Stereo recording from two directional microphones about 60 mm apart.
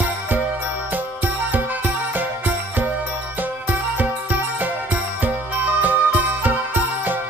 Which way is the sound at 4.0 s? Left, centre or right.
Right.